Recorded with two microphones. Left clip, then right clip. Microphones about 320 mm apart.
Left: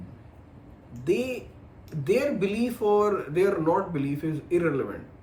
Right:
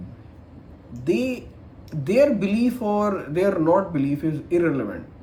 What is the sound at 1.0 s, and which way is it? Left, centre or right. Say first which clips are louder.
Speech: right 3 dB; centre.